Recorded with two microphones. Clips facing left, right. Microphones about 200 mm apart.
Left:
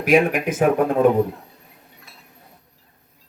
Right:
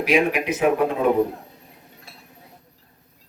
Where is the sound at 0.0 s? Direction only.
50° left (ahead or behind).